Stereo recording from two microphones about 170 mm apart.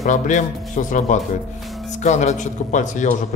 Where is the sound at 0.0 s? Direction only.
45° left (ahead or behind).